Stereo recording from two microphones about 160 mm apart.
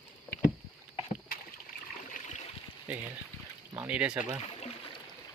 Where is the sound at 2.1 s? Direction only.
50° left (ahead or behind).